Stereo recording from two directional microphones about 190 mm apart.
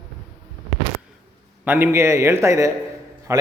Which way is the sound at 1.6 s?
10° right (ahead or behind).